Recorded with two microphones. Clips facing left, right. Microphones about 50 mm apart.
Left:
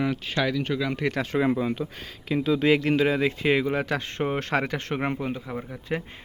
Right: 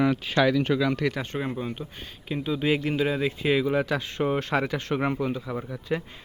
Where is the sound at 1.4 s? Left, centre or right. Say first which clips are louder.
Left 7 dB; left.